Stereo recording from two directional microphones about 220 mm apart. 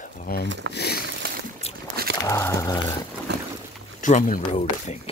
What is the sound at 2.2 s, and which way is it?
Speech, 15° left (ahead or behind).